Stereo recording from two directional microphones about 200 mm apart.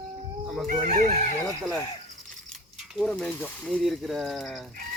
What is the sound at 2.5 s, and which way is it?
Pulleys, centre (ahead or behind).